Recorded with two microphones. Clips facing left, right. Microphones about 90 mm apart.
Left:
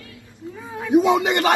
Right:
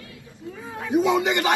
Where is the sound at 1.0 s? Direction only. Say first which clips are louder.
Left 3 dB; 55° left (ahead or behind).